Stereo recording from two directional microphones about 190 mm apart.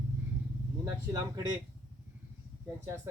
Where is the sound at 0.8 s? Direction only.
15° right (ahead or behind).